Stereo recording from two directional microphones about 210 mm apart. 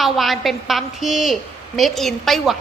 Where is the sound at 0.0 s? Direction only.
Centre (ahead or behind).